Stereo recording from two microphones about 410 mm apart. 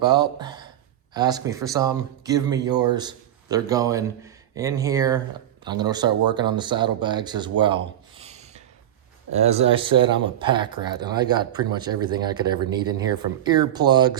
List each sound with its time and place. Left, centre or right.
0.0 s speech: centre
8.2 s a sound: centre
9.3 s speech: centre